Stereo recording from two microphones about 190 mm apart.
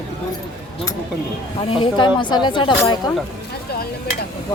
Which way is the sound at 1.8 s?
25° left (ahead or behind).